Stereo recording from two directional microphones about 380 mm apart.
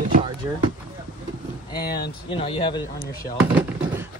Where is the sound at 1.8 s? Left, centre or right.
Left.